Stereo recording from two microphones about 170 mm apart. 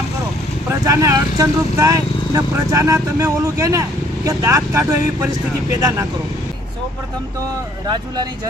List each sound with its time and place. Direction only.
0.9 s speech: 20° right (ahead or behind)
7.9 s speech: 25° right (ahead or behind)